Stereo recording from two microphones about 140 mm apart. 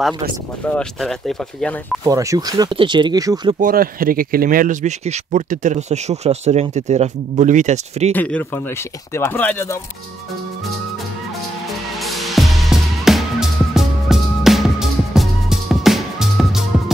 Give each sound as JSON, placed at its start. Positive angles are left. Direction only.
{"t": 0.7, "sound": "speech", "side_deg": 0}
{"t": 2.0, "sound": "speech", "side_deg": -25}
{"t": 3.6, "sound": "speech", "side_deg": -90}
{"t": 4.8, "sound": "speech", "side_deg": -55}
{"t": 8.1, "sound": "speech", "side_deg": 10}
{"t": 12.0, "sound": "music", "side_deg": 0}